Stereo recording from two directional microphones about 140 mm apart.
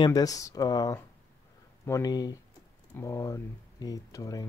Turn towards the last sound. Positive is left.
turn(degrees=25)  # may be behind; listen again after turning